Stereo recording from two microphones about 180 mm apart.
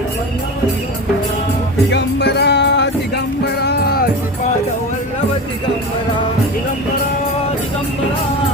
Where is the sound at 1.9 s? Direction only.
70° left (ahead or behind).